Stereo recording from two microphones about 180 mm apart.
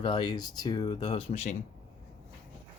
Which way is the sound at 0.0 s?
25° left (ahead or behind).